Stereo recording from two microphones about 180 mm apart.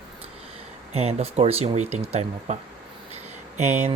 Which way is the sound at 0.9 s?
35° right (ahead or behind).